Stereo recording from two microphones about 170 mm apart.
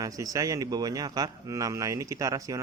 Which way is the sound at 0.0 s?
20° right (ahead or behind).